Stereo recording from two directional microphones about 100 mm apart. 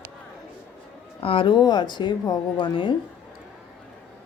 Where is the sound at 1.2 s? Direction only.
65° left (ahead or behind).